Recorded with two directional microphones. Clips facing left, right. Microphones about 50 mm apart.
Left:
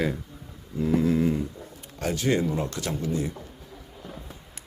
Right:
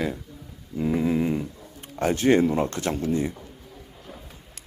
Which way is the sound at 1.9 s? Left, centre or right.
Right.